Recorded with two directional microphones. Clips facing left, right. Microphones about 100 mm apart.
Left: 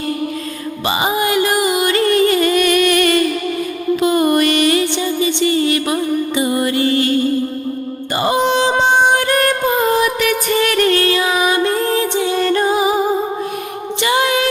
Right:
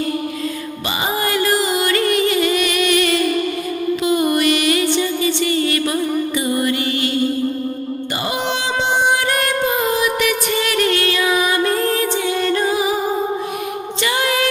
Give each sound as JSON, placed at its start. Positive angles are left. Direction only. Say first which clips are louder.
{"t": 0.9, "sound": "music", "louder": "left 4 dB", "side_deg": 20}
{"t": 2.3, "sound": "music", "louder": "left 4 dB", "side_deg": 45}
{"t": 4.0, "sound": "mantra", "louder": "left 3 dB", "side_deg": 45}
{"t": 5.2, "sound": "music", "louder": "left 3 dB", "side_deg": 25}
{"t": 8.1, "sound": "music", "louder": "left 8 dB", "side_deg": 35}
{"t": 14.0, "sound": "music", "louder": "left 4 dB", "side_deg": 25}